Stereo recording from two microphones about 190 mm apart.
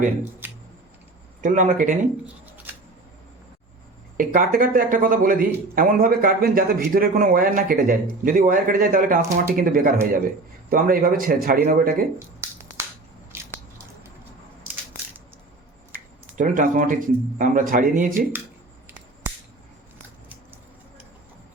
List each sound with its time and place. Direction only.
0.4 s a sound: 10° right (ahead or behind)
1.4 s speech: 45° right (ahead or behind)
2.7 s a sound: 10° right (ahead or behind)
4.2 s speech: 45° right (ahead or behind)
13.3 s squish: 15° right (ahead or behind)
16.4 s speech: 45° right (ahead or behind)